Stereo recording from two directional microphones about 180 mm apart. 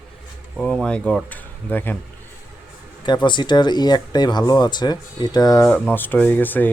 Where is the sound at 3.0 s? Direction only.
25° left (ahead or behind).